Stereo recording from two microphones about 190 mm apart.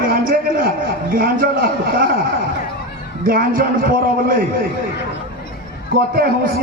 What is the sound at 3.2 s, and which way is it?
A man's voice, 50° right (ahead or behind).